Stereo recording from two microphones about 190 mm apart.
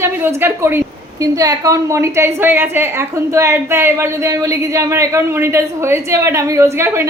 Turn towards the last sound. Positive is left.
turn(degrees=-15)  # may be behind; listen again after turning